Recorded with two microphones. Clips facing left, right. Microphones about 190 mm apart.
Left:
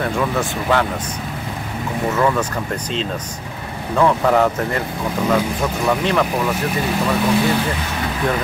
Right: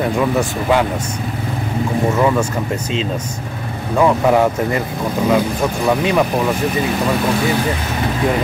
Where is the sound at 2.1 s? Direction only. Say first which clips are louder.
Even; 10° right (ahead or behind).